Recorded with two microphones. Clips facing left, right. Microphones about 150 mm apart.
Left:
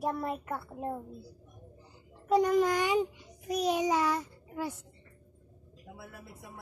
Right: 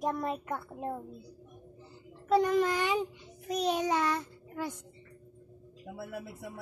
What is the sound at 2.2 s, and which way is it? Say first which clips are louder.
Speech: left 1 dB; 10° left (ahead or behind).